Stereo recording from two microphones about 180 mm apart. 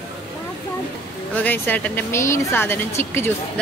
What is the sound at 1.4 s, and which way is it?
Speech, 10° left (ahead or behind).